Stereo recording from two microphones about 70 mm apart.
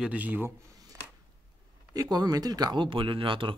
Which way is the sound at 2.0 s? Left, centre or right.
Right.